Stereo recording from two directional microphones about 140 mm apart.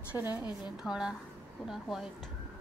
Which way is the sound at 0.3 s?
30° left (ahead or behind).